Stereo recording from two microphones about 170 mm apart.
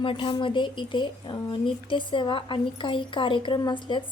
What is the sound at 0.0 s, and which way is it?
A woman's voice, 30° left (ahead or behind).